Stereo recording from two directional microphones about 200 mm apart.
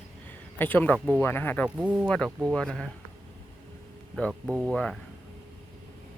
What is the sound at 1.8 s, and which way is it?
Speech, 5° right (ahead or behind).